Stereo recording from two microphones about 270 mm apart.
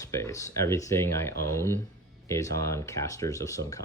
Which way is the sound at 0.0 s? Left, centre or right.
Centre.